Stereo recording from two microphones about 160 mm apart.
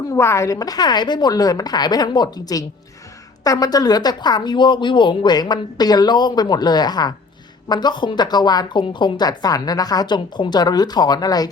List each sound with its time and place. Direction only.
0.1 s a woman's voice: 15° left (ahead or behind)